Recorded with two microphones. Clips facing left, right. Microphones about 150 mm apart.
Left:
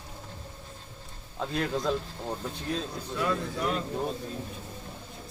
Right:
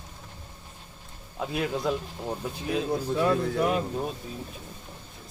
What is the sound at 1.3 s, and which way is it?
Speech, 10° right (ahead or behind).